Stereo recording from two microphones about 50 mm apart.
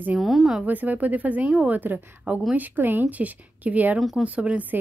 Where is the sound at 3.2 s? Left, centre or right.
Right.